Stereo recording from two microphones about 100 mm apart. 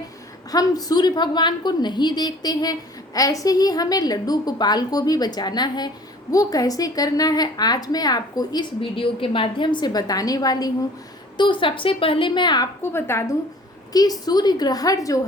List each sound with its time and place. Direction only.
0.5 s a woman's voice: 40° left (ahead or behind)
8.8 s a woman's voice: 60° left (ahead or behind); by 10.7 s 40° left (ahead or behind)
11.3 s a woman's voice: 55° left (ahead or behind)
12.8 s a woman's voice: 25° left (ahead or behind)
13.9 s a woman's voice: 40° left (ahead or behind)